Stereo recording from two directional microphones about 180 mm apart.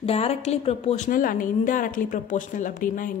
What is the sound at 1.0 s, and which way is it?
Speech, 50° left (ahead or behind).